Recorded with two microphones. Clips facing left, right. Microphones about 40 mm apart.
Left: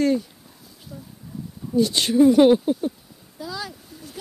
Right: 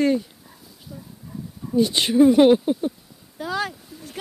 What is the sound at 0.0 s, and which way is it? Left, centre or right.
Speech, centre.